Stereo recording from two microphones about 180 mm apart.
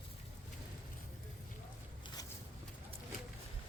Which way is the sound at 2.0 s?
20° left (ahead or behind).